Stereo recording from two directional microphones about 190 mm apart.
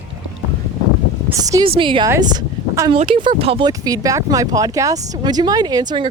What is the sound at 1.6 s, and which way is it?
Speech, 30° right (ahead or behind).